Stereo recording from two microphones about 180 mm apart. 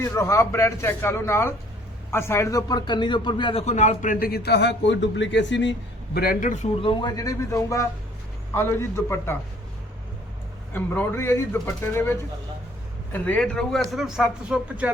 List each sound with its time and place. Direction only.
0.0 s a man's voice: 15° left (ahead or behind); by 5.7 s 80° left
6.1 s a man's voice: 50° left (ahead or behind)
6.8 s a man's voice: 25° left (ahead or behind)
10.7 s a man's voice: 10° left (ahead or behind)
13.1 s speech: 10° left (ahead or behind)